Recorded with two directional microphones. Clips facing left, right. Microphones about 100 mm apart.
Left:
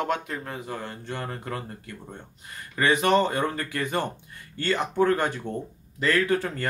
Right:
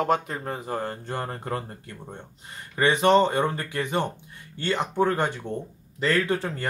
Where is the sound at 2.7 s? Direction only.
25° right (ahead or behind).